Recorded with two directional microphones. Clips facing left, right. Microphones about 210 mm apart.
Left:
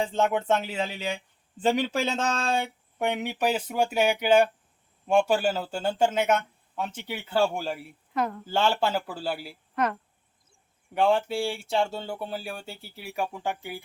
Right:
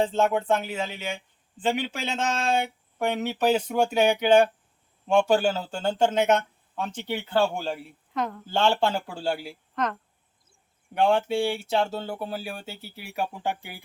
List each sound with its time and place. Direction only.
0.1 s speech: 20° left (ahead or behind); by 2.6 s 35° left (ahead or behind)
3.0 s speech: 15° left (ahead or behind); by 13.8 s centre (ahead or behind)